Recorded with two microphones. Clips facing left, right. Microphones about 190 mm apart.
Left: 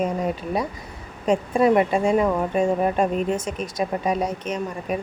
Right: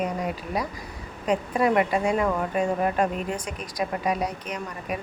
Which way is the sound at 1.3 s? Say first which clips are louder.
Left 4 dB; 25° left (ahead or behind).